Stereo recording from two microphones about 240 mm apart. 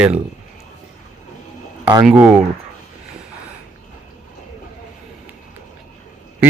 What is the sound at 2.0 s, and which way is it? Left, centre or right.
Speech, centre.